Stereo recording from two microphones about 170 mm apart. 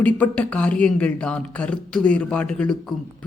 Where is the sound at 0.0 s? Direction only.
10° left (ahead or behind).